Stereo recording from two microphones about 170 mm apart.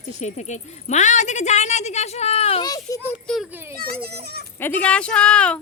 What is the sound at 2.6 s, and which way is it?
Speech, 20° left (ahead or behind).